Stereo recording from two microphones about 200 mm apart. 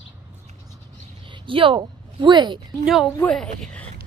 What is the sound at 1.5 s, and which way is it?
Speech, 25° right (ahead or behind).